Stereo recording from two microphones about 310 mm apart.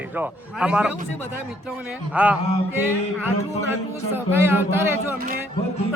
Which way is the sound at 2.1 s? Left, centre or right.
Centre.